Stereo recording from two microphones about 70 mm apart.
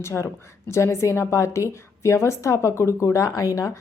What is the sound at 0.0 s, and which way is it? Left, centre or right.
A woman's voice, left.